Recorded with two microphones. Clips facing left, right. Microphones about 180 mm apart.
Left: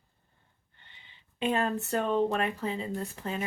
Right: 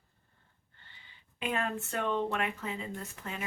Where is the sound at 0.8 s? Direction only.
25° left (ahead or behind).